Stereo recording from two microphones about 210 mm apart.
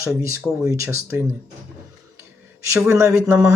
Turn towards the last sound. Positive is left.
turn(degrees=-10)  # may be behind; listen again after turning